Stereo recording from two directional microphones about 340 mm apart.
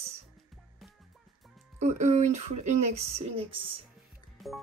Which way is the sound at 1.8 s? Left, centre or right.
Centre.